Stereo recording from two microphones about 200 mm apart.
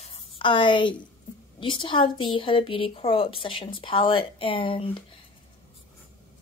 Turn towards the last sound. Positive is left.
turn(degrees=25)  # may be behind; listen again after turning